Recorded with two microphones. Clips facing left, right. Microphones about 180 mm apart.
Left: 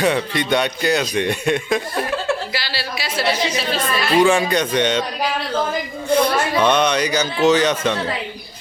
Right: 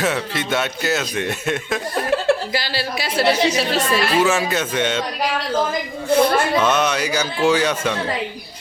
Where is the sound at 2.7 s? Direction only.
45° right (ahead or behind).